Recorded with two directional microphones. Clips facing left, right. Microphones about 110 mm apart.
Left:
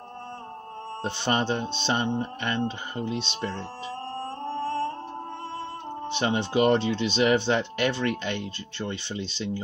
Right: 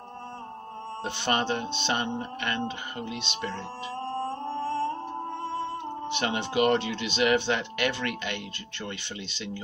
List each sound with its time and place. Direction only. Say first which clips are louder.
1.0 s speech: left 2 dB; 30° left (ahead or behind)
1.8 s music: left 3 dB; 30° left (ahead or behind)
3.0 s speech: left 6 dB; 30° left (ahead or behind)
4.3 s music: even; 10° right (ahead or behind)
6.0 s speech: left 4 dB; 30° left (ahead or behind)